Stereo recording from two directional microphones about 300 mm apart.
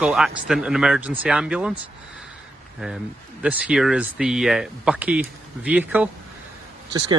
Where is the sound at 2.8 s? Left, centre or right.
Centre.